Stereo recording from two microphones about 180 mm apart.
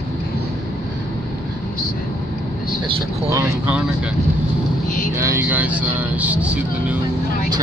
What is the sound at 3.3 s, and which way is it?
Speech, 15° right (ahead or behind).